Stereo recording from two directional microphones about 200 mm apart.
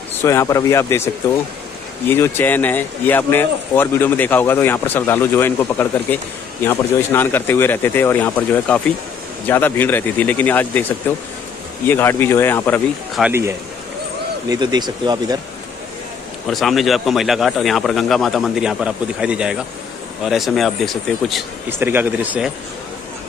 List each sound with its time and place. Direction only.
0.2 s speech: 15° left (ahead or behind)
13.1 s speech: 10° right (ahead or behind)
14.5 s speech: 20° right (ahead or behind)
16.4 s speech: centre (ahead or behind)
21.6 s speech: 10° right (ahead or behind)